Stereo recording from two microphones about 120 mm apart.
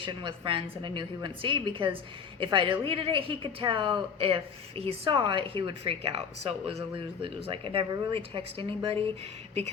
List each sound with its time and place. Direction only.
0.0 s speech: 45° right (ahead or behind)
5.1 s speech: 40° right (ahead or behind)